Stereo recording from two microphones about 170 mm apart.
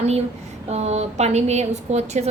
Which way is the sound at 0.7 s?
40° right (ahead or behind).